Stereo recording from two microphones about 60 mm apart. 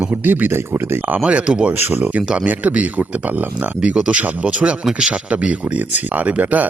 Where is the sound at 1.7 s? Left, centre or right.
Right.